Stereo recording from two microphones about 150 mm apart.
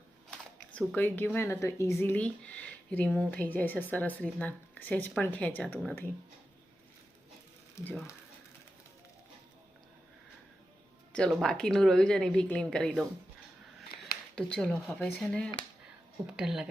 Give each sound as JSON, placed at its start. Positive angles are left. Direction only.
{"t": 0.3, "sound": "speech", "side_deg": 5}
{"t": 7.8, "sound": "speech", "side_deg": 20}
{"t": 11.1, "sound": "speech", "side_deg": 5}
{"t": 14.3, "sound": "speech", "side_deg": 5}